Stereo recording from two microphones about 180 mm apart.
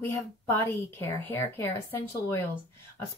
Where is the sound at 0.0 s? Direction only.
15° left (ahead or behind).